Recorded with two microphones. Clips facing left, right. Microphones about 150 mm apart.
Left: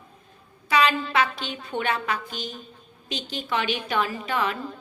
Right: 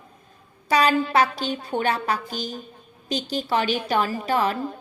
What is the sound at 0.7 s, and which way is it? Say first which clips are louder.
A woman's voice: right 3 dB; 40° right (ahead or behind).